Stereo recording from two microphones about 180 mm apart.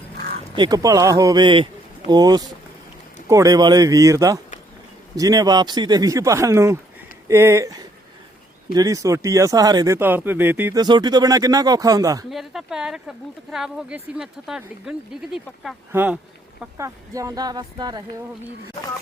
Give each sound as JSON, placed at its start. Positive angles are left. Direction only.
{"t": 0.5, "sound": "speech", "side_deg": -25}
{"t": 10.8, "sound": "speech", "side_deg": -25}
{"t": 12.3, "sound": "speech", "side_deg": 0}